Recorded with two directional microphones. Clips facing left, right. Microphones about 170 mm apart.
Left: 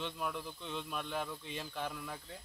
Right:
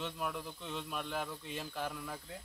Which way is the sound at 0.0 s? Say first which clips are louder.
Even; 5° right (ahead or behind).